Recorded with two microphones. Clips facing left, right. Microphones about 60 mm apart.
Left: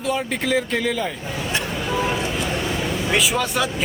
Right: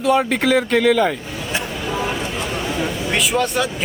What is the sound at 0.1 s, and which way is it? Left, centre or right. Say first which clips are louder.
Speech: right 6 dB; right.